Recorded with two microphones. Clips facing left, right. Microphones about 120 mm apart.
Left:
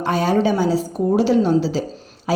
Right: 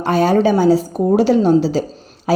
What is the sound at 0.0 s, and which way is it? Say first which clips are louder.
A woman's voice: right 4 dB; 45° right (ahead or behind).